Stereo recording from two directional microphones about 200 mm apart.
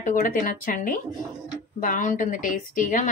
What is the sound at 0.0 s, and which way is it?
A woman's voice, 40° left (ahead or behind).